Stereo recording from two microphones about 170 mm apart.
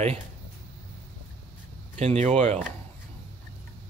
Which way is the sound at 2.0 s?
40° right (ahead or behind).